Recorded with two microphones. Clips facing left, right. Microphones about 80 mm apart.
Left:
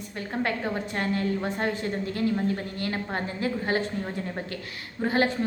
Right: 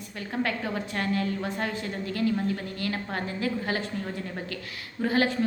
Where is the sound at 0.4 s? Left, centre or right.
Left.